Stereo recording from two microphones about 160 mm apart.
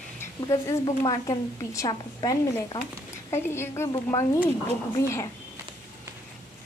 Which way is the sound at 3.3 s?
15° left (ahead or behind).